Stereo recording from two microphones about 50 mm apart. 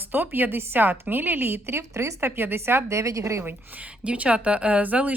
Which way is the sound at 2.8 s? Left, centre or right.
Right.